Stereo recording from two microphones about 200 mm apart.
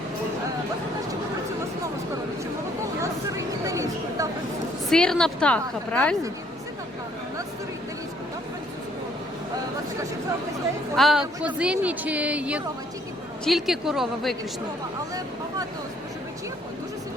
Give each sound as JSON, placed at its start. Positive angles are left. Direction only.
{"t": 3.0, "sound": "a sound", "side_deg": -15}
{"t": 4.9, "sound": "a woman's voice", "side_deg": 5}
{"t": 10.9, "sound": "a woman's voice", "side_deg": 0}